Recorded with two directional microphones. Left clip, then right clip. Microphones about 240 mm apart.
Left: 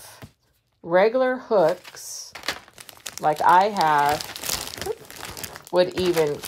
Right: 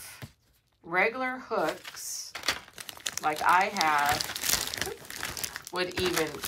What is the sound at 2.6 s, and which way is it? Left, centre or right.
Crumpling, left.